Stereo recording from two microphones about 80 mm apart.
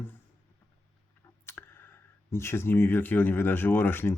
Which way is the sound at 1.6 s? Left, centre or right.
Left.